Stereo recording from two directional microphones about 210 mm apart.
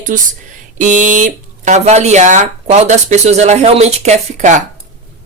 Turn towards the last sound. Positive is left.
turn(degrees=-35)  # may be behind; listen again after turning